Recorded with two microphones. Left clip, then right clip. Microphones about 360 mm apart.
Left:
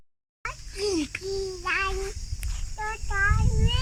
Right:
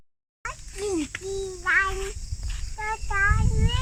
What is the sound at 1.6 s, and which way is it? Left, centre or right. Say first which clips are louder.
Speech: right 6 dB; centre.